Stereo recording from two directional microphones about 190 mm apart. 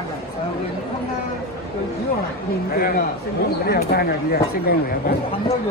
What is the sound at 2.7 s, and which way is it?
Speech, 50° left (ahead or behind).